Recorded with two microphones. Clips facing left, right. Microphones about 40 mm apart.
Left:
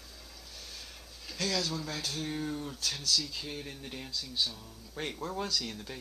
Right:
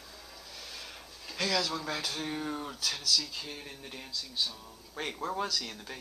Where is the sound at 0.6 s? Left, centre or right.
Right.